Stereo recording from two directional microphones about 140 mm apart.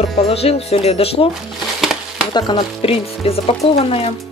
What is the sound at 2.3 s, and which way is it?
Speech, 30° left (ahead or behind).